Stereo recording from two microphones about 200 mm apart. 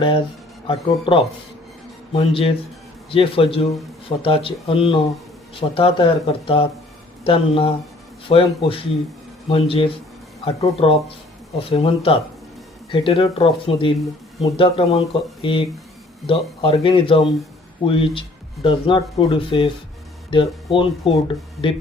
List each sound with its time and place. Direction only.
0.7 s speech: 25° left (ahead or behind)